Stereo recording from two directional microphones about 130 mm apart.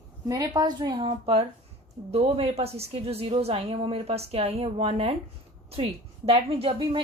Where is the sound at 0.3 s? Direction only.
25° right (ahead or behind).